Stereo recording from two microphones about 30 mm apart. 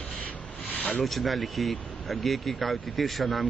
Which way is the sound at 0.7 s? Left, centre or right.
Left.